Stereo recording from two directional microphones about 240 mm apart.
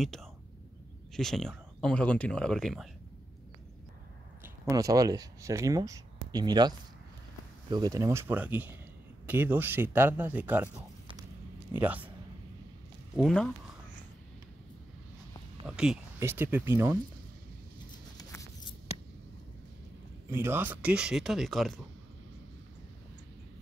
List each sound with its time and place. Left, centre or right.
0.0 s speech: centre
4.4 s speech: centre
7.7 s speech: centre
13.1 s speech: centre
15.6 s speech: centre
18.1 s a sound: centre
20.2 s speech: centre